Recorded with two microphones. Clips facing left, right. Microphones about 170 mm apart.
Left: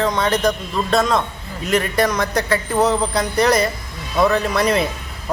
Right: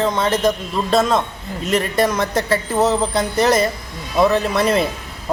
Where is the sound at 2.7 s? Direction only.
Centre (ahead or behind).